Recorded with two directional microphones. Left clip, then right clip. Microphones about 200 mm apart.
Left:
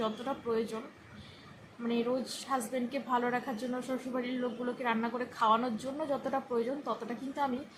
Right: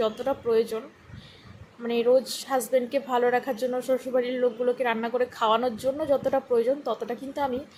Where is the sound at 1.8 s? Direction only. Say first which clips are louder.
Right 11 dB; 25° right (ahead or behind).